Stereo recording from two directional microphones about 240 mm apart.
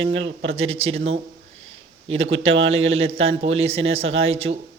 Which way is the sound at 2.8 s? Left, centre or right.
Right.